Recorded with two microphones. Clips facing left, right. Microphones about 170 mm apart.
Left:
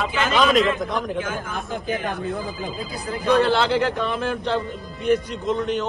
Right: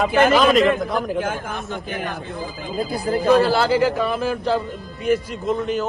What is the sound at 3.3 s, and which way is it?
A man's voice, 5° right (ahead or behind).